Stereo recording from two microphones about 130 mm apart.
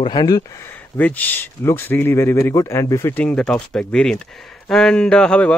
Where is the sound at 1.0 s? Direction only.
15° left (ahead or behind).